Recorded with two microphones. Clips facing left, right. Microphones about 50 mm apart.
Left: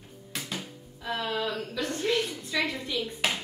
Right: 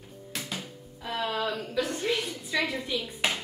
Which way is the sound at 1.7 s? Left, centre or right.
Centre.